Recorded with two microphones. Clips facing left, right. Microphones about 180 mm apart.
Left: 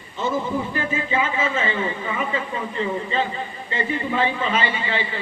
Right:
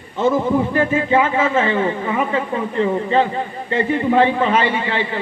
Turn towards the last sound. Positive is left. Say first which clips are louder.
# right 5 dB
turn(degrees=-60)  # may be behind; listen again after turning